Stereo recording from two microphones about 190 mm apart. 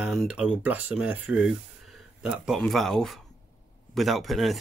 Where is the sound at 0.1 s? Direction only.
Centre (ahead or behind).